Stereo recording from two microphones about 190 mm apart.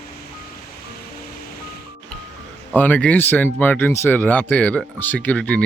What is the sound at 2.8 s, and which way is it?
A man's voice, 10° left (ahead or behind).